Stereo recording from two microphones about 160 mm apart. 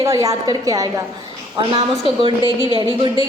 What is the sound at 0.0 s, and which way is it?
A woman's voice, 20° right (ahead or behind).